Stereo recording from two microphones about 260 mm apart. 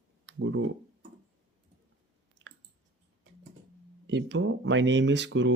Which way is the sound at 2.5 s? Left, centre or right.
Right.